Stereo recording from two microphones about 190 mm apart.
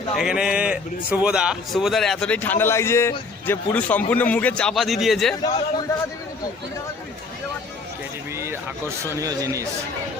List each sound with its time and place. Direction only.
0.2 s a man's voice: 5° right (ahead or behind)
5.4 s a man's voice: 25° left (ahead or behind)
9.0 s speech: 15° right (ahead or behind)